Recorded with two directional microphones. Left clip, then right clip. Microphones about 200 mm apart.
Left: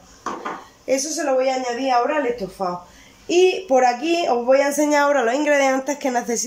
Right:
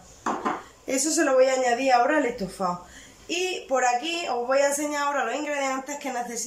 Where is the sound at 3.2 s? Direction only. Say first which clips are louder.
Left 11 dB; 25° left (ahead or behind).